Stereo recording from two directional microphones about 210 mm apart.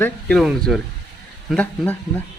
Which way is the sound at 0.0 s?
5° left (ahead or behind).